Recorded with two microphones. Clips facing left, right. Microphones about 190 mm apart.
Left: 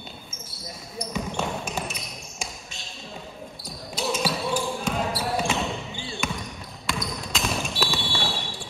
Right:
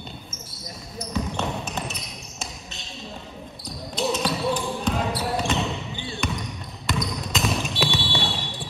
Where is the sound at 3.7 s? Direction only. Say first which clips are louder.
Right 3 dB; centre (ahead or behind).